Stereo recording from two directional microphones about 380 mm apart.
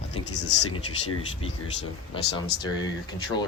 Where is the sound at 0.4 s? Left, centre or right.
Left.